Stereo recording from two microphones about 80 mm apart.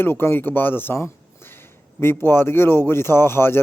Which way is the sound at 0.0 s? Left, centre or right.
Left.